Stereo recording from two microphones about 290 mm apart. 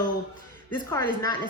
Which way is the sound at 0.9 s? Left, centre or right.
Centre.